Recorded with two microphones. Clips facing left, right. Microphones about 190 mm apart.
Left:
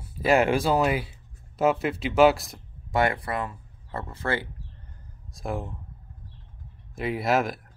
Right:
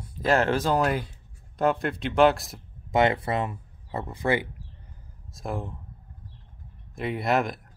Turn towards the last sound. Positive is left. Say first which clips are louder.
# left 1 dB
turn(degrees=0)  # may be behind; listen again after turning